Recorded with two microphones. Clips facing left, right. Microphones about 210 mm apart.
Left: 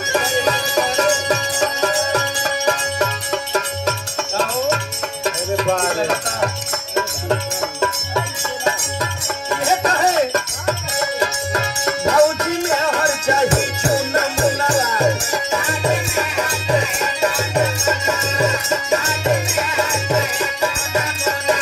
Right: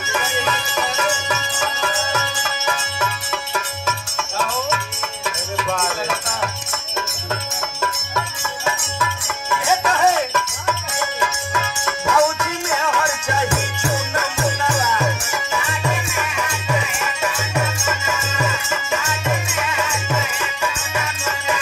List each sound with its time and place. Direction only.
0.1 s music: 35° left (ahead or behind)
5.2 s music: 35° left (ahead or behind)
8.6 s music: 40° left (ahead or behind)